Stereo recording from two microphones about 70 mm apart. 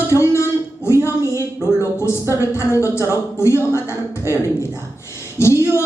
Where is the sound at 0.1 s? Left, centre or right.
Left.